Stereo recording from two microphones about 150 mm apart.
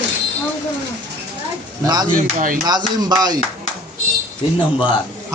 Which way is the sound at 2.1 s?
65° right (ahead or behind).